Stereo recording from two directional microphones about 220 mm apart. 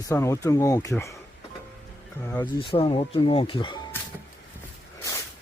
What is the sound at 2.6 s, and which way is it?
Speech, 25° left (ahead or behind).